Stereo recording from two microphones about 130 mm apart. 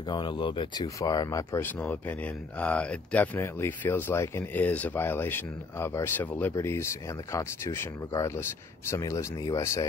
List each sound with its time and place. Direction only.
0.1 s speech: 35° left (ahead or behind)
0.8 s speech: 30° left (ahead or behind)
1.6 s speech: 15° left (ahead or behind)